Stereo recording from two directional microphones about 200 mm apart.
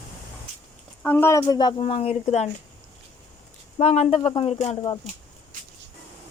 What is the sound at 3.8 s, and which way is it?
Speech, 30° left (ahead or behind).